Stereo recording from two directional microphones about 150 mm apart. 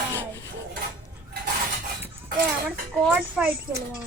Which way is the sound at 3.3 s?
10° right (ahead or behind).